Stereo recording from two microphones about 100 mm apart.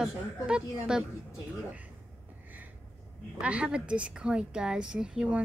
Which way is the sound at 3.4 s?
10° right (ahead or behind).